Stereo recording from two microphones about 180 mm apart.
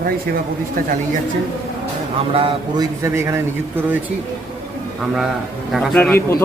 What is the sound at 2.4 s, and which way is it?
Speech, 30° right (ahead or behind).